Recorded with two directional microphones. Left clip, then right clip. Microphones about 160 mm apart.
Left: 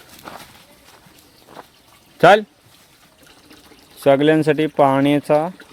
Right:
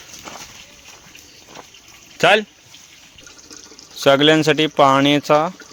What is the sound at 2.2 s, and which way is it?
Speech, 5° left (ahead or behind).